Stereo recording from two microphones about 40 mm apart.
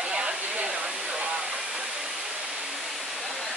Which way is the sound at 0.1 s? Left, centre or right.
Right.